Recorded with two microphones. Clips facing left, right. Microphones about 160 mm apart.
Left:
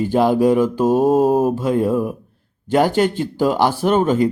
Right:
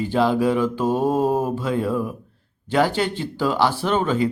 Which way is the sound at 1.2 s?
5° left (ahead or behind).